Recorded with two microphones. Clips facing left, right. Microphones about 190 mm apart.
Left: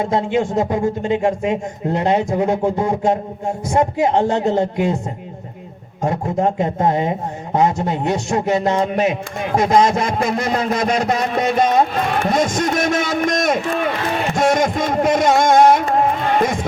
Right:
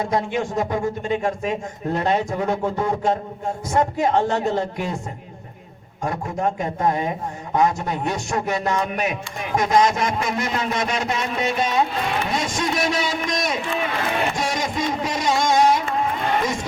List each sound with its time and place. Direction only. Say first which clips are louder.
0.0 s a man's voice: left 5 dB; 25° left (ahead or behind)
6.0 s a man's voice: left 6 dB; 30° left (ahead or behind)
9.6 s a sound: left 3 dB; 30° left (ahead or behind)
10.2 s speech: left 5 dB; 35° left (ahead or behind); by 15.8 s 55° left (ahead or behind)